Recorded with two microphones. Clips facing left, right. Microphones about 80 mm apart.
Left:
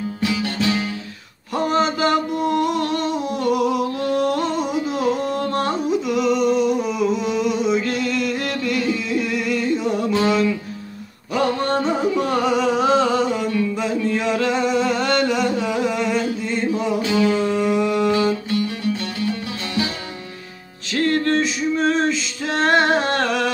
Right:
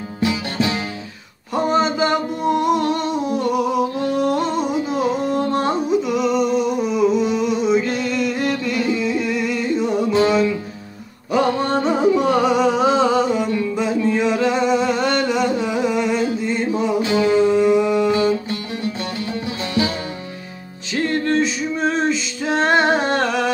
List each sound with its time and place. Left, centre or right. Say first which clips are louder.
0.2 s music: right 2 dB; right
1.5 s mantra: right 1 dB; centre
3.5 s a sound: right 1 dB; centre
4.0 s music: right 1 dB; centre
4.6 s carnatic music: right 1 dB; centre
5.9 s a sound: right 1 dB; centre
7.9 s music: right 1 dB; centre
17.1 s music: right 4 dB; right
17.6 s a sound: right 3 dB; centre
20.9 s music: even; centre